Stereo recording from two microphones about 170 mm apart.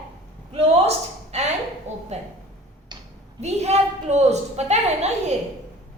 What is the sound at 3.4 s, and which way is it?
A woman's voice, 40° right (ahead or behind).